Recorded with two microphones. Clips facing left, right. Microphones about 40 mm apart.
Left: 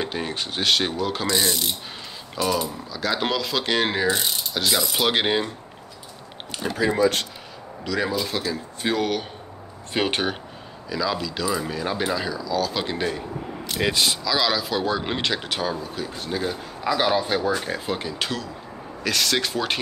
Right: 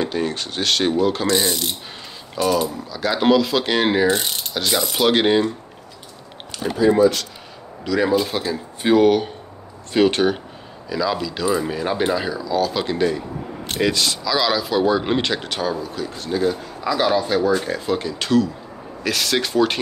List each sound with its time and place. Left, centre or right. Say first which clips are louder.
0.0 s speech: right 5 dB; centre
7.8 s speech: right 5 dB; centre
8.1 s speech: right 6 dB; centre
9.9 s speech: right 7 dB; centre
10.9 s speech: right 3 dB; centre
12.6 s speech: right 5 dB; centre
14.2 s speech: right 3 dB; centre